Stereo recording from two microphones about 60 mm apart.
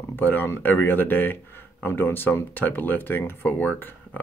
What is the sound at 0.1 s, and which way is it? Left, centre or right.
Speech, left.